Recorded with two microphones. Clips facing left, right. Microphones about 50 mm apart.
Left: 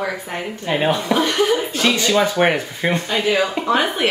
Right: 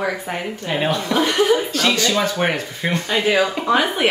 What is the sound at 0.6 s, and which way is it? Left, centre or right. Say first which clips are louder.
Speech: left 3 dB; centre.